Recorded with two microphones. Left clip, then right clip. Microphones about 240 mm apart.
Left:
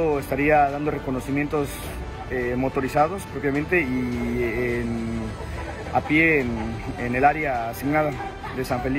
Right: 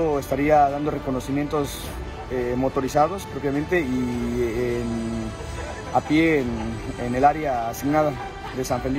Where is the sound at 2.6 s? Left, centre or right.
Right.